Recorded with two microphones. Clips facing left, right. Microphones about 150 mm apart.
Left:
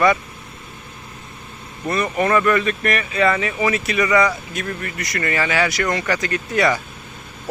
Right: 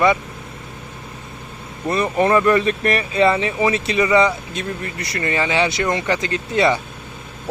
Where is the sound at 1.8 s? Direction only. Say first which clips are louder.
Right 2 dB; 30° right (ahead or behind).